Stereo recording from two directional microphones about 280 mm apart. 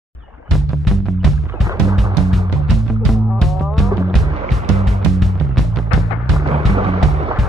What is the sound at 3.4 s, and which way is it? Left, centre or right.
Music, centre.